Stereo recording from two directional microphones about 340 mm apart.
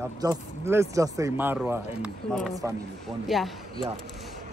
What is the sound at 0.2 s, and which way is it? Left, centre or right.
Speech, centre.